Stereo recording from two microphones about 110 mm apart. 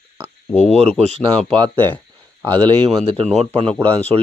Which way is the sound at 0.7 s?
75° right (ahead or behind).